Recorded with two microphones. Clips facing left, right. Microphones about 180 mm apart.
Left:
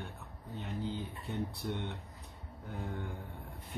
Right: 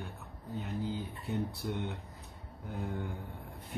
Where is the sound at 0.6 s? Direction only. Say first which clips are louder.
Right 1 dB; 5° right (ahead or behind).